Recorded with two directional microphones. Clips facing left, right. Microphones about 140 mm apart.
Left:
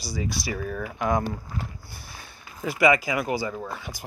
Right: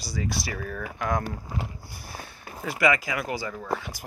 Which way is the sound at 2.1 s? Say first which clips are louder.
Right 4 dB; 35° right (ahead or behind).